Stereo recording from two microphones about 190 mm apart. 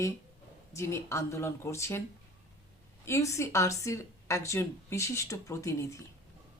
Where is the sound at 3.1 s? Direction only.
15° left (ahead or behind).